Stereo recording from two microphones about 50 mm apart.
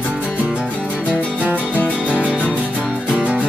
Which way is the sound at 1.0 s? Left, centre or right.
Left.